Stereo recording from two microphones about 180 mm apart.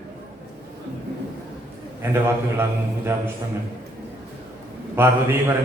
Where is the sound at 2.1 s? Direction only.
15° right (ahead or behind).